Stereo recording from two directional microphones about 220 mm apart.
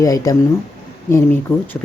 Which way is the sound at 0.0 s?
15° left (ahead or behind).